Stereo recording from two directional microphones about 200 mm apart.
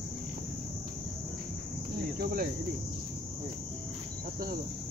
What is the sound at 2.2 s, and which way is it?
Cricket, 50° right (ahead or behind).